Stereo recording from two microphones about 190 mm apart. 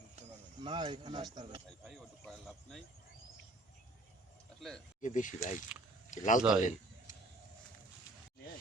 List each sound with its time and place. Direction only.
0.2 s speech: 30° right (ahead or behind)
1.8 s speech: centre (ahead or behind)
4.9 s speech: 40° left (ahead or behind)
6.6 s a sound: 40° left (ahead or behind)